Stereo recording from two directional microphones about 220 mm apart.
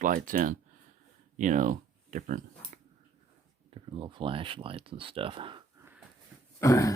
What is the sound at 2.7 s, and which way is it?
Dog, 35° right (ahead or behind).